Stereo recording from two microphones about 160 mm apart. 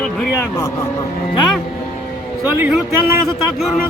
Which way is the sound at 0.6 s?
20° left (ahead or behind).